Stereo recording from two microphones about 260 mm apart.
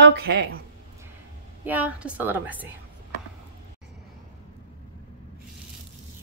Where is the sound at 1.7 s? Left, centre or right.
Centre.